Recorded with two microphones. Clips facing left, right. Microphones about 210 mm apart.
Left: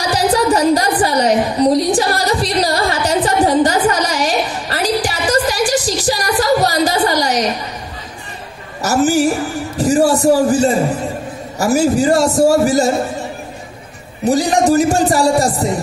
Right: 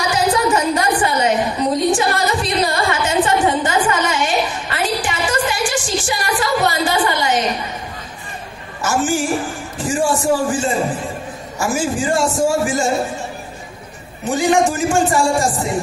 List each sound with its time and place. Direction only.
0.1 s a sound: 35° left (ahead or behind)
8.8 s a woman's voice: 40° left (ahead or behind)
14.2 s a man's voice: 35° left (ahead or behind)